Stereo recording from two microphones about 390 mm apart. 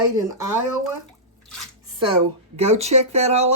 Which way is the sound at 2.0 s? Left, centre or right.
Centre.